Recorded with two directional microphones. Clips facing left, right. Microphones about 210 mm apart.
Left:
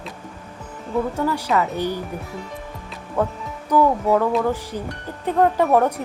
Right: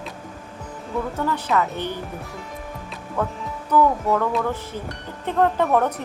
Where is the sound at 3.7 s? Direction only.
15° left (ahead or behind).